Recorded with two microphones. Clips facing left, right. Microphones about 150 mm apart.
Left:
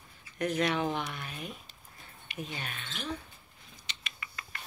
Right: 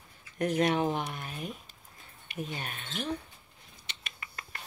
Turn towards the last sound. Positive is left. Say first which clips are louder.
# even
turn(degrees=-45)  # may be behind; listen again after turning